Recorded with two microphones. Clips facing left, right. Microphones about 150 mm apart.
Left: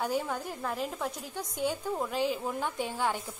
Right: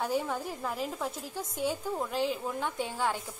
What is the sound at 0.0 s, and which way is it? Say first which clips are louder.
A woman's voice: even; 5° right (ahead or behind).